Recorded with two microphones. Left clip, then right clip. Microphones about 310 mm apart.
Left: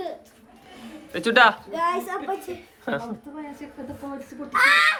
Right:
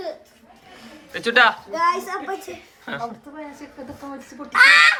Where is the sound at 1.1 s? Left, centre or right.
Centre.